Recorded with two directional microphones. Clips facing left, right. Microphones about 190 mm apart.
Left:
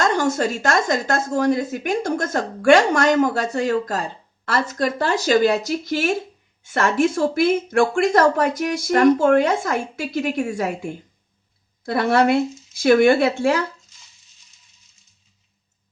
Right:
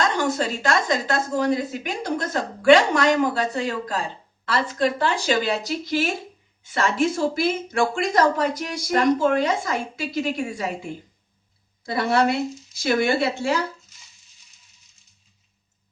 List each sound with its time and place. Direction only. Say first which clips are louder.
0.2 s speech: left 3 dB; 45° left (ahead or behind)
11.9 s speech: left 4 dB; 55° left (ahead or behind)